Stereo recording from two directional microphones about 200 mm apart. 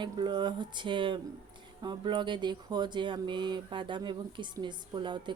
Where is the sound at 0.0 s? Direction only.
25° right (ahead or behind).